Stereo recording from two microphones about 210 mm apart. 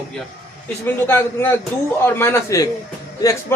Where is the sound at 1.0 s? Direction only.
10° left (ahead or behind).